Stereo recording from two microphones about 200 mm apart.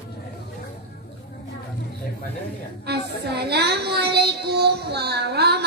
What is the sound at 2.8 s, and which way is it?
Child singing, 55° right (ahead or behind).